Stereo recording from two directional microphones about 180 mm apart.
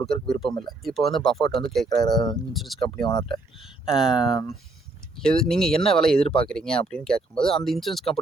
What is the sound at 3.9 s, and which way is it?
Speech, 5° right (ahead or behind).